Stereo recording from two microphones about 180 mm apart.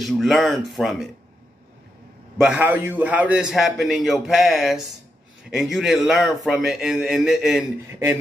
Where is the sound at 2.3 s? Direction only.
5° right (ahead or behind).